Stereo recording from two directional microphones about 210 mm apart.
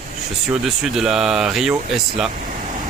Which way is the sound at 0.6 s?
Centre (ahead or behind).